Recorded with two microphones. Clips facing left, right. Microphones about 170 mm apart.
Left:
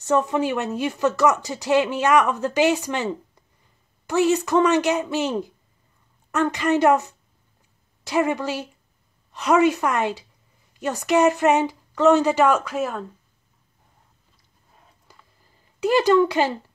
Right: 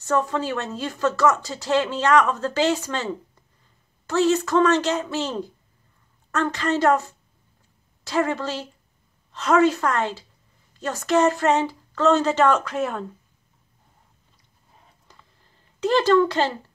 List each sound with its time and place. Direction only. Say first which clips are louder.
0.0 s speech: left 3 dB; 20° left (ahead or behind)
15.1 s a sound: even; 10° left (ahead or behind)
15.8 s speech: left 1 dB; 10° left (ahead or behind)